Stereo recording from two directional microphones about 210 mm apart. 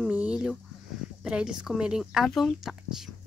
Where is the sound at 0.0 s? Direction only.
5° right (ahead or behind).